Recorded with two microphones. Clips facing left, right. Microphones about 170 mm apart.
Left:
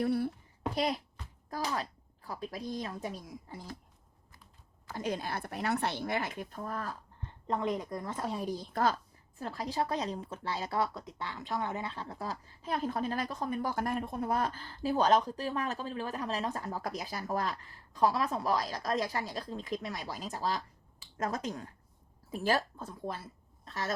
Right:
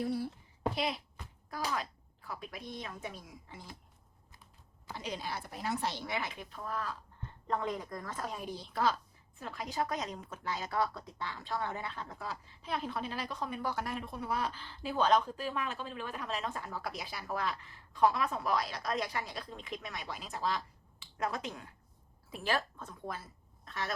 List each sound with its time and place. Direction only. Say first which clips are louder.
0.0 s a sound: left 4 dB; 60° left (ahead or behind)
0.8 s speech: left 4 dB; 45° left (ahead or behind)
4.9 s speech: left 5 dB; 50° left (ahead or behind)
7.4 s speech: left 3 dB; 20° left (ahead or behind); by 9.0 s 45° left (ahead or behind)
9.4 s a woman's voice: left 3 dB; 35° left (ahead or behind)